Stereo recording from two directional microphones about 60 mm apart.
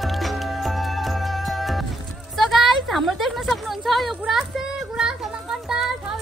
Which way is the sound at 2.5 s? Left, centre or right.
Centre.